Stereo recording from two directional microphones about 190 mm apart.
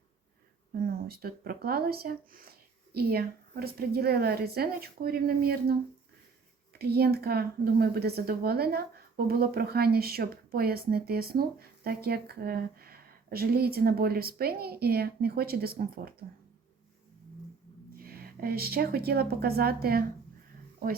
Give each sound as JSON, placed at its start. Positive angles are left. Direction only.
{"t": 0.7, "sound": "speech", "side_deg": -50}
{"t": 6.7, "sound": "speech", "side_deg": -55}
{"t": 17.9, "sound": "a woman's voice", "side_deg": -50}